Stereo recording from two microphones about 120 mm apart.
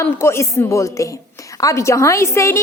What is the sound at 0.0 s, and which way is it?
A woman's voice, 20° left (ahead or behind).